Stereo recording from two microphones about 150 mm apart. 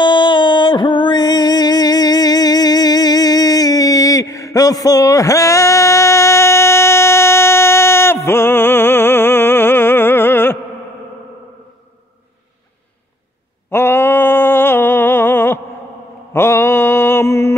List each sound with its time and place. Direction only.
0.0 s music: 30° left (ahead or behind); by 10.6 s 15° left (ahead or behind)
13.7 s a sound: 15° left (ahead or behind)
16.3 s mantra: 15° left (ahead or behind)